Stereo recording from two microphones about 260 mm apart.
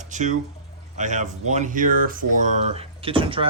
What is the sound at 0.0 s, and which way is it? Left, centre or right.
Speech, right.